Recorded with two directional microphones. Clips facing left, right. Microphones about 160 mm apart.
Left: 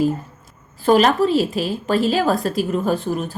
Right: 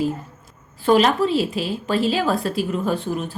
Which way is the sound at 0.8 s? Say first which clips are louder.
Left 2 dB; 45° left (ahead or behind).